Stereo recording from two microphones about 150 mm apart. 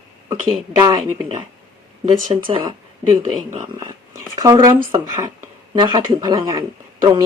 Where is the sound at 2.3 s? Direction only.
35° right (ahead or behind).